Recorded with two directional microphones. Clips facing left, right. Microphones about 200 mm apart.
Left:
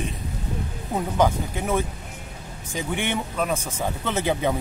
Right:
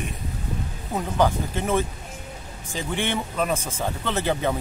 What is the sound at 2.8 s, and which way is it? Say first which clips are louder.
Speech: even; 15° left (ahead or behind).